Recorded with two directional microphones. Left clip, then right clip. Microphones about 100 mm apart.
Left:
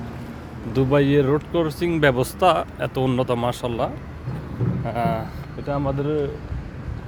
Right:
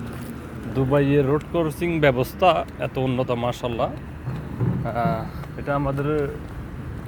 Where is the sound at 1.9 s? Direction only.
35° left (ahead or behind).